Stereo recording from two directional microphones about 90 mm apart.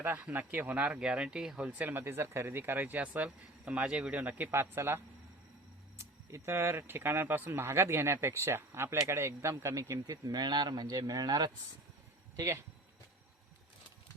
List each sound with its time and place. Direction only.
0.0 s speech: 20° right (ahead or behind)
6.0 s speech: 30° right (ahead or behind)
10.2 s speech: 50° right (ahead or behind)
12.4 s speech: 35° right (ahead or behind)